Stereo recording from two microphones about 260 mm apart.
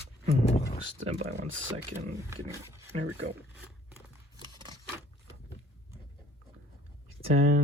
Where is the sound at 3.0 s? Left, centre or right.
Right.